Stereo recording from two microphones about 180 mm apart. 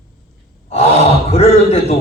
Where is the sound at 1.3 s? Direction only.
35° left (ahead or behind).